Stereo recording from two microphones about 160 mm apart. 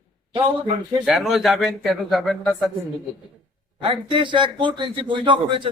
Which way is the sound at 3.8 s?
35° right (ahead or behind).